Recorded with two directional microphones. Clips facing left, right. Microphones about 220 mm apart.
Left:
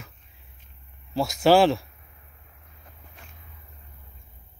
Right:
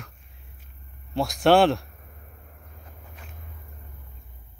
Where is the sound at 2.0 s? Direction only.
45° right (ahead or behind).